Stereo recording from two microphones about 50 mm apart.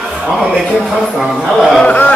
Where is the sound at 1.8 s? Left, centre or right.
Left.